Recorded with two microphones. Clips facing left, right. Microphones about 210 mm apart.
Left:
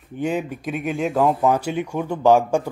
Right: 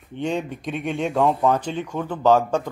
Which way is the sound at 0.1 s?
5° left (ahead or behind).